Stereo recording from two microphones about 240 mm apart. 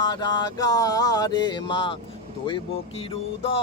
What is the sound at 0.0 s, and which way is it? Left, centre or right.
Mantra, centre.